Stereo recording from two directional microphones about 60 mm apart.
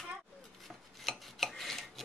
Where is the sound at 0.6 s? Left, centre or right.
Centre.